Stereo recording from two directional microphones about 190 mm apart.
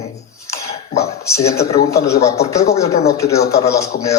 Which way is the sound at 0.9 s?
35° left (ahead or behind).